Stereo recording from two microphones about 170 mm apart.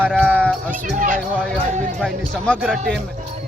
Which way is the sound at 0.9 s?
50° right (ahead or behind).